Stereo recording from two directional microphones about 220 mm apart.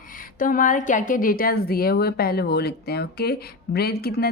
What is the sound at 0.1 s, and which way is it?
A woman's voice, 40° left (ahead or behind).